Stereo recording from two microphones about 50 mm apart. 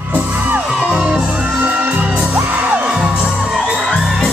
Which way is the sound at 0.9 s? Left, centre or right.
Centre.